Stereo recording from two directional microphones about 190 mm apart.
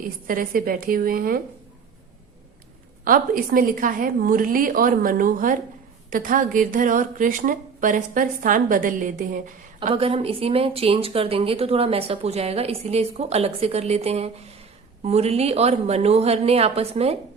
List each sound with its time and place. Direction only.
0.3 s speech: 50° right (ahead or behind)
3.0 s speech: 45° right (ahead or behind)
9.9 s speech: 30° right (ahead or behind)